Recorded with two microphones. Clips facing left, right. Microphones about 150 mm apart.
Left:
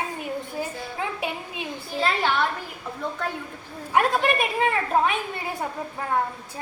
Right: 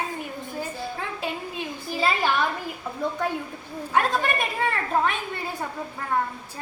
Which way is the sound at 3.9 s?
15° left (ahead or behind).